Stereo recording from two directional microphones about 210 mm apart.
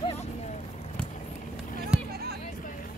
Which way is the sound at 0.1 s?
30° left (ahead or behind).